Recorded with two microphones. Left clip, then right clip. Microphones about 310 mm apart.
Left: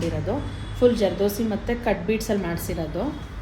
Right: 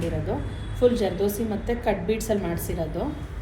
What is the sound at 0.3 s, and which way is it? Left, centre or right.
A woman's voice, left.